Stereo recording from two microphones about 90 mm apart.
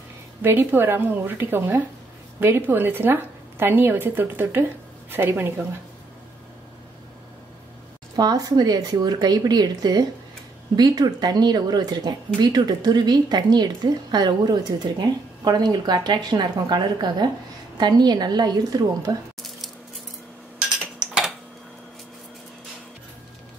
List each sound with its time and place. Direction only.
0.4 s a woman's voice: 25° right (ahead or behind)
8.2 s speech: 45° right (ahead or behind)